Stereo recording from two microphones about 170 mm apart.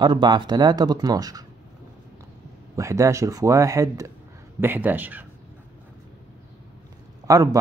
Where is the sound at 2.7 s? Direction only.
15° right (ahead or behind).